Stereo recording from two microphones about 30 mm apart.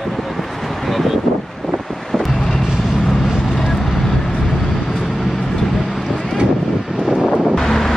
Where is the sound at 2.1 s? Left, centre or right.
Centre.